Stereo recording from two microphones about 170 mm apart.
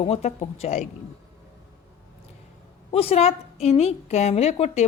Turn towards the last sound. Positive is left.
turn(degrees=40)  # may be behind; listen again after turning